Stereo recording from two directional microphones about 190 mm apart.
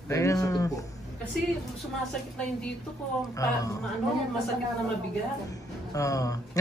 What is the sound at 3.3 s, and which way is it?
Speech, 20° left (ahead or behind).